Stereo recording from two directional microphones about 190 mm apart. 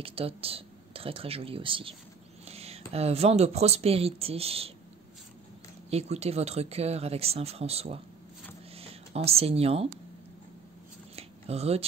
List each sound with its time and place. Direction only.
0.0 s speech: 30° right (ahead or behind)
5.9 s speech: 35° right (ahead or behind)
11.1 s a sound: 35° right (ahead or behind)